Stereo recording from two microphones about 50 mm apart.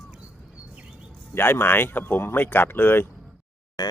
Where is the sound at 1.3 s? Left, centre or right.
Left.